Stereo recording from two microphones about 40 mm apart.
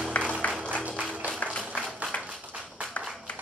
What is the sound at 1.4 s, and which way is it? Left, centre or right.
Music, left.